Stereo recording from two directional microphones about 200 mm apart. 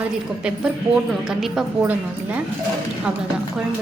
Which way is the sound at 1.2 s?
Centre (ahead or behind).